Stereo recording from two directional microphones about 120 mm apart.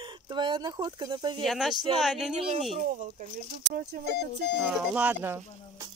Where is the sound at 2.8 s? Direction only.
90° right.